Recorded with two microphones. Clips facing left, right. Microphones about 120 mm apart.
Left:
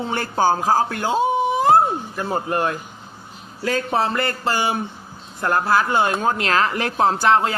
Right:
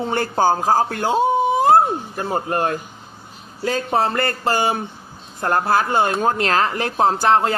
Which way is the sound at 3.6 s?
30° right (ahead or behind).